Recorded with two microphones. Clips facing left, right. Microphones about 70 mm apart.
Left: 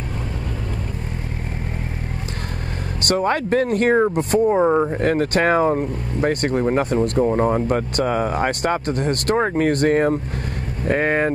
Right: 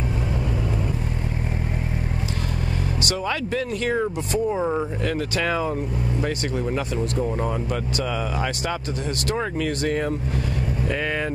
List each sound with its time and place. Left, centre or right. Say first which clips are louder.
3.1 s speech: left 9 dB; left